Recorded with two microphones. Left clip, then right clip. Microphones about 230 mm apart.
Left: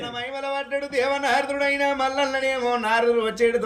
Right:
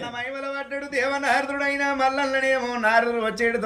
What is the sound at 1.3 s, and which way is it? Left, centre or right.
A man's voice, centre.